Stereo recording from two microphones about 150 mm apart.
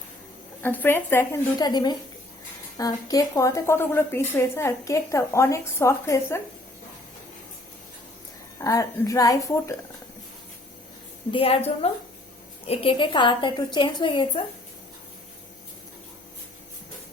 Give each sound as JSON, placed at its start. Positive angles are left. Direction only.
{"t": 0.6, "sound": "speech", "side_deg": 10}
{"t": 1.5, "sound": "a woman's voice", "side_deg": 25}
{"t": 8.5, "sound": "a woman's voice", "side_deg": 20}
{"t": 11.3, "sound": "a woman's voice", "side_deg": 40}